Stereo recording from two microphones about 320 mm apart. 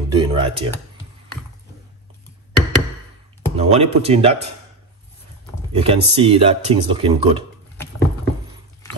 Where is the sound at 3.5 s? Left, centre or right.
Centre.